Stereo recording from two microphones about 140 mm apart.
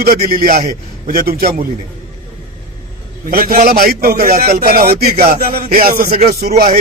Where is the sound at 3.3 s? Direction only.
90° right.